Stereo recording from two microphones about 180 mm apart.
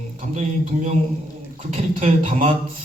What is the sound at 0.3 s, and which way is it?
Speech, 45° right (ahead or behind).